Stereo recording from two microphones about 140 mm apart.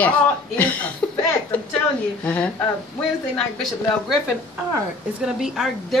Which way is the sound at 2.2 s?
10° left (ahead or behind).